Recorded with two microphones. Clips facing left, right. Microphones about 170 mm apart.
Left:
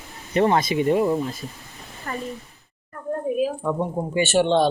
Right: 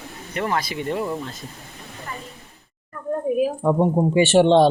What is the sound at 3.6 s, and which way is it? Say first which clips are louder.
A man's voice: right 6 dB; 35° right (ahead or behind).